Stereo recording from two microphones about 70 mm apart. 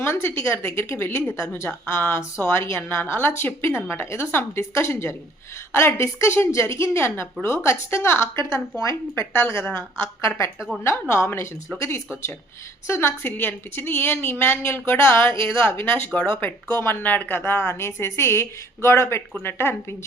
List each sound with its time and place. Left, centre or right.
0.0 s a woman's voice: left